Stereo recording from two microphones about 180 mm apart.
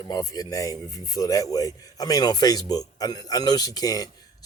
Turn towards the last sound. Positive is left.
turn(degrees=20)  # may be behind; listen again after turning